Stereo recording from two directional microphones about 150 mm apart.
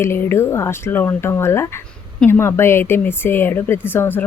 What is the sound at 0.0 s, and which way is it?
Speech, 15° left (ahead or behind).